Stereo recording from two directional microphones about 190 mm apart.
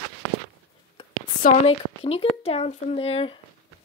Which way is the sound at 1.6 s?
30° left (ahead or behind).